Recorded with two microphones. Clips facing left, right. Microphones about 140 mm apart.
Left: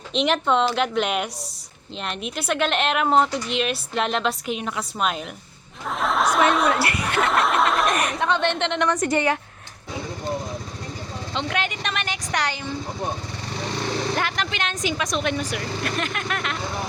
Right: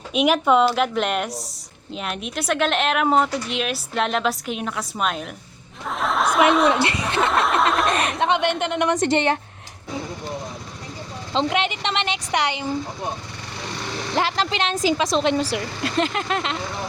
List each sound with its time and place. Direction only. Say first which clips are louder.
0.1 s a woman's voice: right 3 dB; 5° right (ahead or behind)
6.0 s a sound: right 1 dB; centre (ahead or behind)
6.8 s snicker: right 1 dB; 20° right (ahead or behind)
7.2 s a sound: right 1 dB; centre (ahead or behind)
8.2 s speech: right 3 dB; 15° right (ahead or behind)
8.9 s a woman's voice: right 3 dB; 25° right (ahead or behind)
11.3 s speech: right 5 dB; 25° right (ahead or behind)
14.2 s a woman's voice: right 4 dB; 30° right (ahead or behind)